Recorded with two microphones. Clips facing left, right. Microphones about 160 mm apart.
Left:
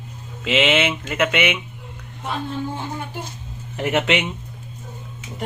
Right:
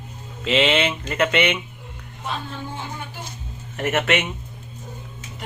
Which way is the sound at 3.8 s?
15° left (ahead or behind).